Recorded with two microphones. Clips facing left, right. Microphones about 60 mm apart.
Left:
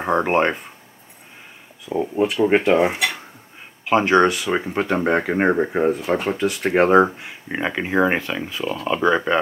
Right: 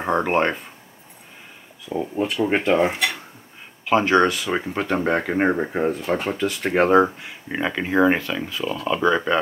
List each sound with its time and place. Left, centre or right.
0.0 s speech: centre
1.9 s speech: centre
3.8 s speech: centre